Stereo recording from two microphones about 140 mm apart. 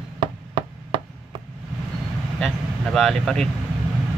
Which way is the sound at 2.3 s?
5° left (ahead or behind).